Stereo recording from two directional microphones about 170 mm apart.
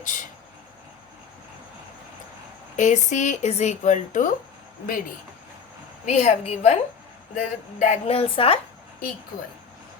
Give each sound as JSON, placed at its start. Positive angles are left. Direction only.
{"t": 0.0, "sound": "a sound", "side_deg": 50}
{"t": 2.7, "sound": "speech", "side_deg": 45}
{"t": 6.1, "sound": "speech", "side_deg": 40}